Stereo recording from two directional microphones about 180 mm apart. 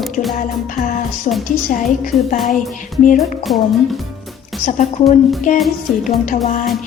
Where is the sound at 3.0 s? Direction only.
45° left (ahead or behind).